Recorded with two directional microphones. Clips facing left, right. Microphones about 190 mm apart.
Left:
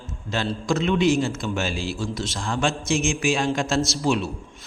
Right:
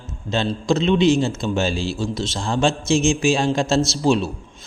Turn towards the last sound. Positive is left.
turn(degrees=-30)  # may be behind; listen again after turning